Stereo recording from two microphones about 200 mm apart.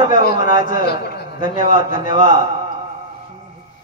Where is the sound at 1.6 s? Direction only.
40° left (ahead or behind).